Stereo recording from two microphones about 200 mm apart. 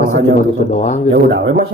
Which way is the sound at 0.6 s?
35° left (ahead or behind).